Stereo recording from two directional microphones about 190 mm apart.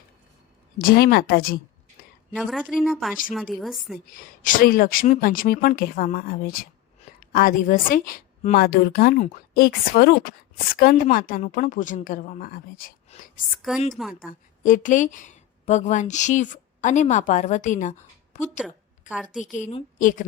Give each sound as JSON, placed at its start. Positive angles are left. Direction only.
{"t": 0.8, "sound": "a woman's voice", "side_deg": 50}
{"t": 2.3, "sound": "speech", "side_deg": 0}
{"t": 3.9, "sound": "a woman's voice", "side_deg": 45}
{"t": 13.4, "sound": "speech", "side_deg": 0}
{"t": 14.6, "sound": "a woman's voice", "side_deg": 45}
{"t": 18.6, "sound": "a sound", "side_deg": -5}
{"t": 20.0, "sound": "a woman's voice", "side_deg": 45}